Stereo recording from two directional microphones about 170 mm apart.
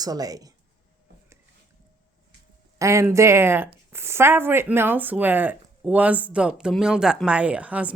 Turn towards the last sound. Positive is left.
turn(degrees=-10)  # may be behind; listen again after turning